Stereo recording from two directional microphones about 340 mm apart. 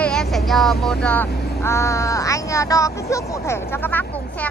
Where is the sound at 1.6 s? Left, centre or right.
Centre.